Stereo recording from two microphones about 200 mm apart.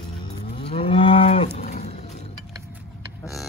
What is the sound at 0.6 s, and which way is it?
Moo, 25° left (ahead or behind).